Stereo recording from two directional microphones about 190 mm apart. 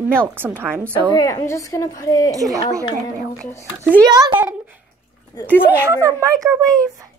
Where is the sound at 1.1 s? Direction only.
20° left (ahead or behind).